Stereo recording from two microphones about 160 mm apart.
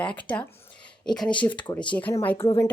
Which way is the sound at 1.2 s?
30° left (ahead or behind).